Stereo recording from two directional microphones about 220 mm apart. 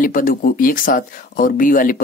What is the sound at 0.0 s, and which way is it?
Speech, 40° left (ahead or behind).